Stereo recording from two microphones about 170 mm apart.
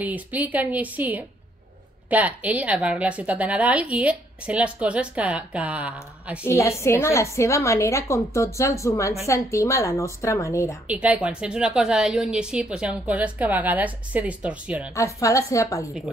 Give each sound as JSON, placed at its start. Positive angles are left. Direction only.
{"t": 0.0, "sound": "a woman's voice", "side_deg": -10}
{"t": 6.4, "sound": "a woman's voice", "side_deg": 15}
{"t": 10.9, "sound": "a woman's voice", "side_deg": -10}
{"t": 15.0, "sound": "a woman's voice", "side_deg": 20}